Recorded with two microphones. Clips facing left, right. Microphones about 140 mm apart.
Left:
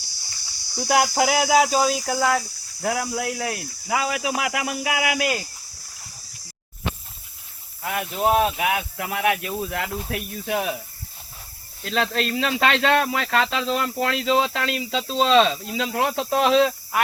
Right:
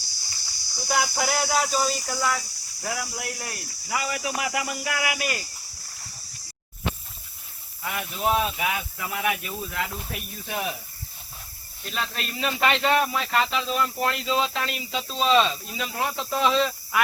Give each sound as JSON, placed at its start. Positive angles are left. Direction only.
{"t": 0.8, "sound": "speech", "side_deg": 80}
{"t": 2.0, "sound": "speech", "side_deg": 55}
{"t": 2.8, "sound": "speech", "side_deg": 75}
{"t": 7.8, "sound": "speech", "side_deg": 55}
{"t": 11.9, "sound": "speech", "side_deg": 90}